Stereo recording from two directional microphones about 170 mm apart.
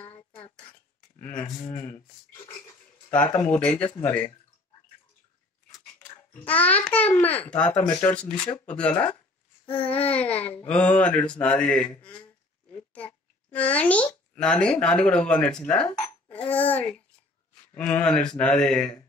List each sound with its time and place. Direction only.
0.0 s a sound: 30° left (ahead or behind)
1.2 s a child's voice: 10° left (ahead or behind)
3.1 s a child's voice: 10° left (ahead or behind)
5.9 s a child's voice: 10° left (ahead or behind)
13.5 s a child's voice: 10° left (ahead or behind)